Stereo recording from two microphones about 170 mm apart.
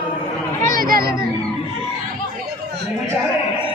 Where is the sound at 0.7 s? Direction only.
55° right (ahead or behind).